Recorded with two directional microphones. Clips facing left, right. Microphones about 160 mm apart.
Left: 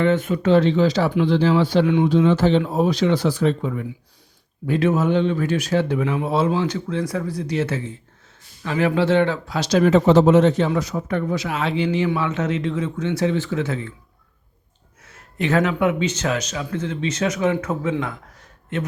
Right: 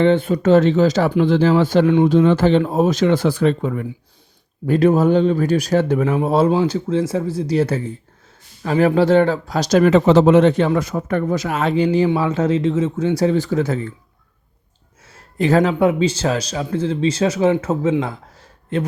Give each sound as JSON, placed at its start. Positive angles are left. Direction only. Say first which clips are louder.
{"t": 0.0, "sound": "speech", "louder": "right 4 dB", "side_deg": -30}
{"t": 0.4, "sound": "speech", "louder": "right 3 dB", "side_deg": -45}
{"t": 2.1, "sound": "speech", "louder": "right 3 dB", "side_deg": -55}
{"t": 4.6, "sound": "a man's voice", "louder": "right 5 dB", "side_deg": -40}
{"t": 9.8, "sound": "a man's voice", "louder": "right 1 dB", "side_deg": -90}
{"t": 15.0, "sound": "a man's voice", "louder": "right 5 dB", "side_deg": -35}
{"t": 18.0, "sound": "a sound", "louder": "right 3 dB", "side_deg": -30}